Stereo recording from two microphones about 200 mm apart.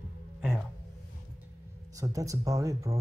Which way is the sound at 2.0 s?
15° right (ahead or behind).